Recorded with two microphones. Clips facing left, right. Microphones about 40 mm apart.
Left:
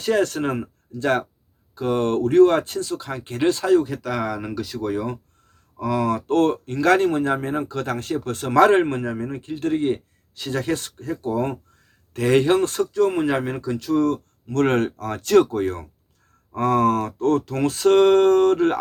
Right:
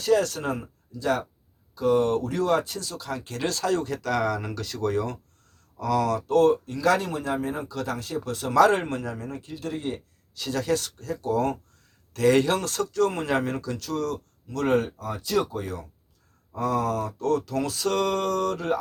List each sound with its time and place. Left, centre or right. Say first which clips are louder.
0.0 s speech: left 2 dB; left
14.5 s speech: left 4 dB; left